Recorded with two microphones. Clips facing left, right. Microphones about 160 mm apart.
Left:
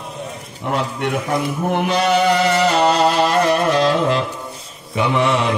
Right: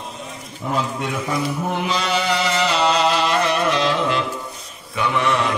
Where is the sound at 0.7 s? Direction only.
65° left (ahead or behind).